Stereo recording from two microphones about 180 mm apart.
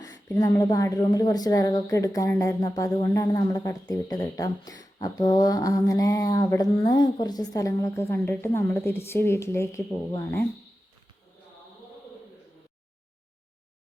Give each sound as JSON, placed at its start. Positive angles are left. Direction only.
{"t": 0.0, "sound": "speech", "side_deg": 20}